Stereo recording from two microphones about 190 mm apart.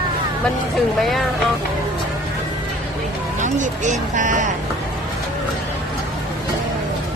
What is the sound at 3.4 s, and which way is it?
Speech, 40° right (ahead or behind).